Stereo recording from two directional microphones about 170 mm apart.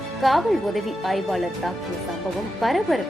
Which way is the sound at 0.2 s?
Centre (ahead or behind).